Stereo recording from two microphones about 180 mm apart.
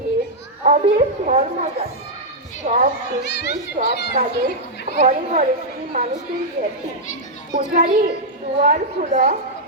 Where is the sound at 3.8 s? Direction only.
70° left (ahead or behind).